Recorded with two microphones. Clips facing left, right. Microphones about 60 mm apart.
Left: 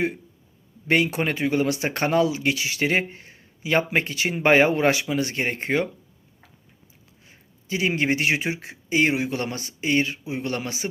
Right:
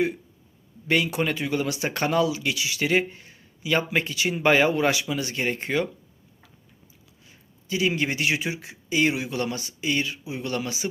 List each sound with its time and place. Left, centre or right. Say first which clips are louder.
0.9 s speech: left 2 dB; left
7.3 s speech: left 1 dB; left